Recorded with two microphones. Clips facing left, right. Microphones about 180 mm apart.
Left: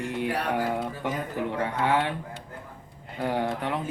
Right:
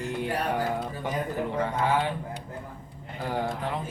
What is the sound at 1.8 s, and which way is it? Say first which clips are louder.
Speech: left 2 dB; 70° left (ahead or behind).